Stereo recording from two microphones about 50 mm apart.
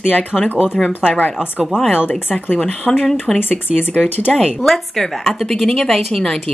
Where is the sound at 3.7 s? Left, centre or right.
Left.